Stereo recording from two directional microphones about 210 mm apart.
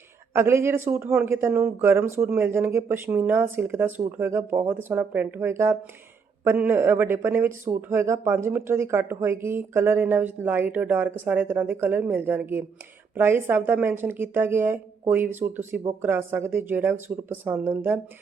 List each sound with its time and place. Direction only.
0.3 s speech: 10° right (ahead or behind)